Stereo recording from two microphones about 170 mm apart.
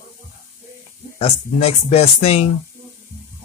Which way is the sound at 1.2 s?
35° left (ahead or behind).